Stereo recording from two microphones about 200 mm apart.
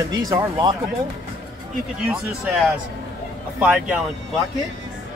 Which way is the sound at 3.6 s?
5° right (ahead or behind).